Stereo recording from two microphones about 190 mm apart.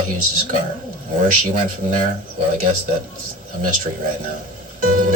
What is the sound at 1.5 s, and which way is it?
Speech, 40° right (ahead or behind).